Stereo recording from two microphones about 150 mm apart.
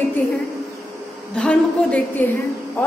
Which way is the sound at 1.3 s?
5° left (ahead or behind).